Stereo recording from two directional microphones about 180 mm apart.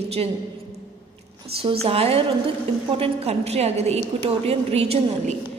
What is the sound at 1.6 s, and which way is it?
A woman's voice, 30° right (ahead or behind).